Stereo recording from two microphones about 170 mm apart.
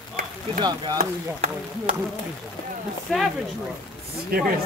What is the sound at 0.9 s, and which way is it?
Speech, 45° right (ahead or behind).